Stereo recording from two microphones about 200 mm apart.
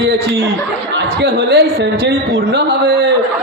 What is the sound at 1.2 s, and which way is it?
A man's voice, 55° right (ahead or behind).